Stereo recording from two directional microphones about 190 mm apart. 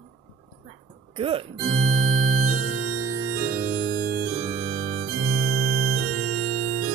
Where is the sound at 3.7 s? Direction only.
50° right (ahead or behind).